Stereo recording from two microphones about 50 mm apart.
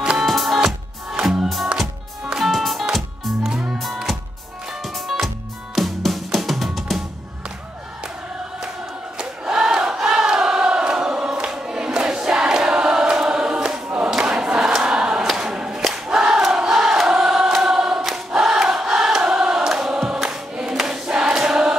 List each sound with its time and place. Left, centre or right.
0.0 s music: centre
0.3 s music: centre
2.2 s music: centre
5.8 s music: centre
9.2 s crowd: centre
13.8 s choir: right
14.1 s crowd: centre
15.2 s a sound: centre
15.8 s crowd: centre
17.1 s choir: centre
18.0 s choir: centre